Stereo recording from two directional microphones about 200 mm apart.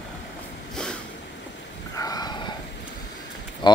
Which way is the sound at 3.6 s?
20° left (ahead or behind).